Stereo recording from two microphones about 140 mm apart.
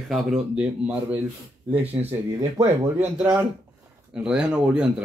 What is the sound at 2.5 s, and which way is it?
Speech, 20° right (ahead or behind).